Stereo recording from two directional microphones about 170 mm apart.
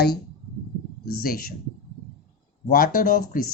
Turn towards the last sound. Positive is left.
turn(degrees=60)  # may be behind; listen again after turning